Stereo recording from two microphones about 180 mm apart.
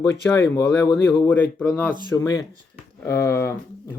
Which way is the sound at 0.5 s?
15° left (ahead or behind).